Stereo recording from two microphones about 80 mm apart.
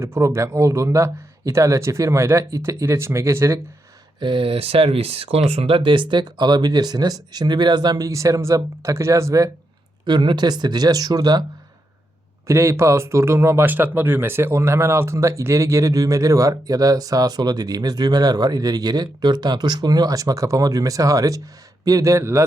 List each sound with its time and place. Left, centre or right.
0.0 s speech: right
4.2 s speech: right
5.8 s speech: right
10.1 s speech: right
12.5 s speech: right
13.7 s speech: right